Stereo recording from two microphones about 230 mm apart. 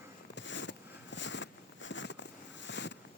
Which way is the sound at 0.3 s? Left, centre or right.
Left.